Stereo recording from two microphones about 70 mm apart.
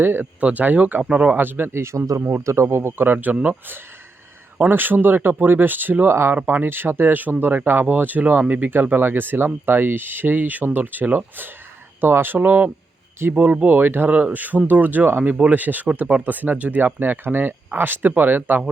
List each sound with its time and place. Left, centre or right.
0.0 s speech: right
1.4 s speech: right
4.7 s speech: right